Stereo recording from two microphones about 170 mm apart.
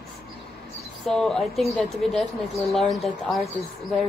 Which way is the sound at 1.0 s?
Centre (ahead or behind).